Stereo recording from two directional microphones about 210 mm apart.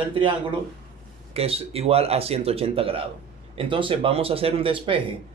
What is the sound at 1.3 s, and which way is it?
Speech, 30° right (ahead or behind).